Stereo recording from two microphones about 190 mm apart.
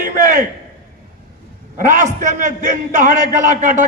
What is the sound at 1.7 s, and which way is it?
A man's voice, 45° right (ahead or behind).